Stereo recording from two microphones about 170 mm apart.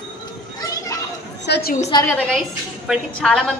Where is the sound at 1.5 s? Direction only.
70° left (ahead or behind).